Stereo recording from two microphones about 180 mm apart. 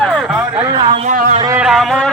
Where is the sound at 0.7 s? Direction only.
30° right (ahead or behind).